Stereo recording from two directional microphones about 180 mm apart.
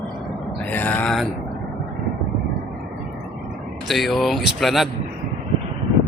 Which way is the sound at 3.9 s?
Centre (ahead or behind).